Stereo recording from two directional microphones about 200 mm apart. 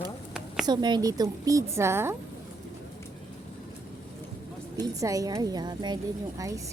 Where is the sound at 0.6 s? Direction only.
20° right (ahead or behind).